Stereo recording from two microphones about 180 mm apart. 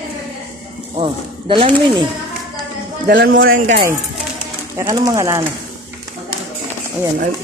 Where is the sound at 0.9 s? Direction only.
30° right (ahead or behind).